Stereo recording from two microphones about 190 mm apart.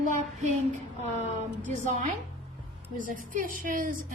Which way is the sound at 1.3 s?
40° right (ahead or behind).